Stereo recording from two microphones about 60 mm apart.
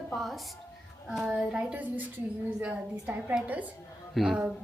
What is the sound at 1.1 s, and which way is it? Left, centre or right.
Speech, centre.